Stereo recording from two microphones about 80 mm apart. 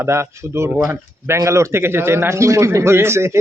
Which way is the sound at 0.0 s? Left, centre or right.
Right.